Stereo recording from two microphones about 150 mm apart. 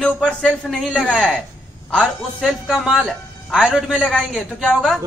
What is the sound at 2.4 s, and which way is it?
A woman's voice, 5° right (ahead or behind).